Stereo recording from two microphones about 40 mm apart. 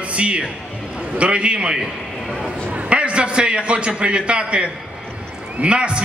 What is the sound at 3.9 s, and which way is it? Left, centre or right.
A man's voice, right.